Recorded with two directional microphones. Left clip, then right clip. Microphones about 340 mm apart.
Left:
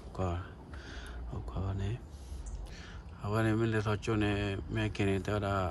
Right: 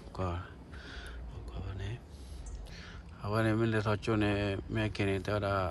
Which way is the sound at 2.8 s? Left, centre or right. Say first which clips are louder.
Right 1 dB; centre.